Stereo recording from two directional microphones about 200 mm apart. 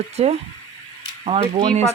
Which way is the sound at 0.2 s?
30° right (ahead or behind).